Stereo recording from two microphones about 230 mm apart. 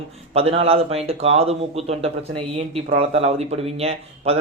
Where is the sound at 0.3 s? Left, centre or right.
Right.